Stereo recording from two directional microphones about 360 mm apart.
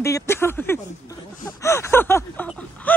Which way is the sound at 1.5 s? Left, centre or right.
Centre.